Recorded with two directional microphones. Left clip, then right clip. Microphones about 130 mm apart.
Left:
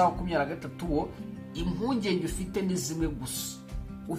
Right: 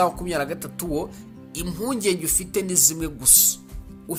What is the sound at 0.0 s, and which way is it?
Speech, 35° right (ahead or behind).